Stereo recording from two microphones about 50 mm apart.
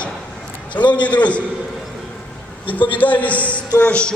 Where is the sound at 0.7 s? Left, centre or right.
Left.